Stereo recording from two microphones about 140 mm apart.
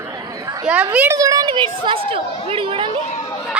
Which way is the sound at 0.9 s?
20° right (ahead or behind).